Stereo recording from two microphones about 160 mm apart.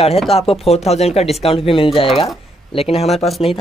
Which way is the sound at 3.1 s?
Centre (ahead or behind).